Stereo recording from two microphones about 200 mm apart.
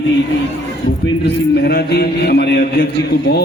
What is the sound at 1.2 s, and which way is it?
Mantra, 50° left (ahead or behind).